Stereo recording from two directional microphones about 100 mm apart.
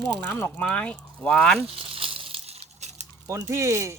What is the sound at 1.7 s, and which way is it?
Crumpling, 65° right (ahead or behind).